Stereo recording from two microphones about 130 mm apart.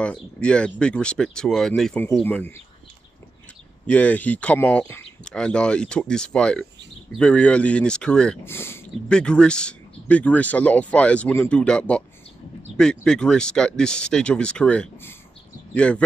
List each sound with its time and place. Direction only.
0.0 s speech: 10° left (ahead or behind)
3.8 s speech: 10° left (ahead or behind)
8.5 s speech: 20° left (ahead or behind)
9.1 s speech: 5° left (ahead or behind)